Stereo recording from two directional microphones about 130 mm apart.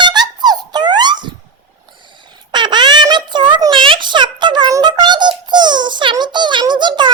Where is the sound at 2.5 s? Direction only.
35° right (ahead or behind).